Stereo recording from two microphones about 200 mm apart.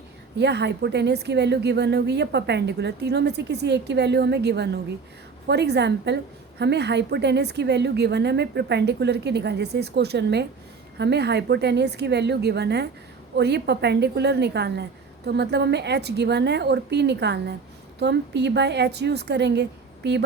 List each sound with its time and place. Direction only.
0.3 s a woman's voice: 55° right (ahead or behind)